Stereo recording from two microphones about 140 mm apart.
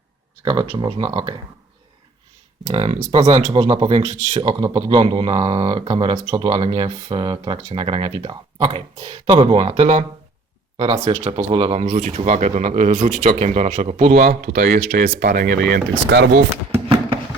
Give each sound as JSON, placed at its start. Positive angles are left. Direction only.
{"t": 0.4, "sound": "speech", "side_deg": -30}
{"t": 2.6, "sound": "speech", "side_deg": -55}
{"t": 4.4, "sound": "speech", "side_deg": -30}
{"t": 5.0, "sound": "speech", "side_deg": -40}
{"t": 6.6, "sound": "speech", "side_deg": -45}
{"t": 9.0, "sound": "speech", "side_deg": -50}
{"t": 14.3, "sound": "speech", "side_deg": -90}